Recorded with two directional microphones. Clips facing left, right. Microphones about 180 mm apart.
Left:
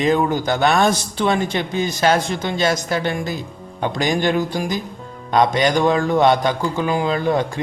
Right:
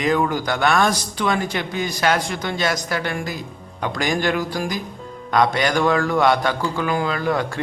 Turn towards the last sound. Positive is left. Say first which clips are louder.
# left 3 dB
turn(degrees=25)  # may be behind; listen again after turning